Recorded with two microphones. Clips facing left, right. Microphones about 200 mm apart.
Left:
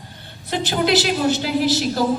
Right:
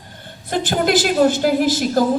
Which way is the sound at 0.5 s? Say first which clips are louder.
Right 2 dB; 50° right (ahead or behind).